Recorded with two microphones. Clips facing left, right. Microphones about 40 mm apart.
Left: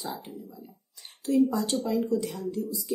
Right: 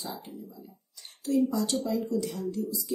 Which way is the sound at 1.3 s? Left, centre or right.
Left.